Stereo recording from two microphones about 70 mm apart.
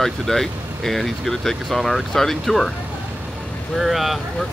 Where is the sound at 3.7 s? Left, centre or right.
Centre.